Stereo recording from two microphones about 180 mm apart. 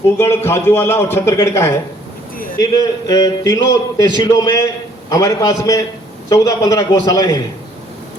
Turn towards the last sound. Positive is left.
turn(degrees=20)  # may be behind; listen again after turning